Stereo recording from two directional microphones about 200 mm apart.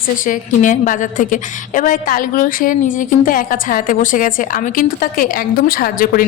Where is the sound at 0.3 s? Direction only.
40° left (ahead or behind).